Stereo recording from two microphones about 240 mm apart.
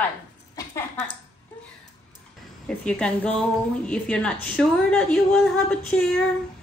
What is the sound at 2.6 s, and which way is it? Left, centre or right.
A woman's voice, centre.